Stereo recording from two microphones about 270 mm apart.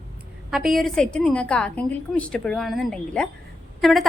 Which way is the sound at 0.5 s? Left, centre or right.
Centre.